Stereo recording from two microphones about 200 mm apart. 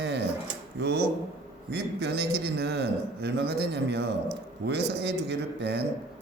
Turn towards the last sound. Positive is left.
turn(degrees=-60)  # may be behind; listen again after turning